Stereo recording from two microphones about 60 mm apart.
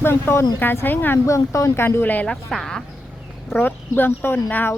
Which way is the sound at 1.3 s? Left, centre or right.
Left.